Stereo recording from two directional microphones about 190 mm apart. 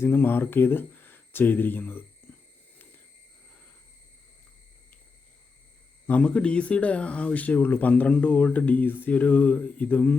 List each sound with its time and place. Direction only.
0.0 s speech: 10° left (ahead or behind)
6.1 s speech: 5° left (ahead or behind)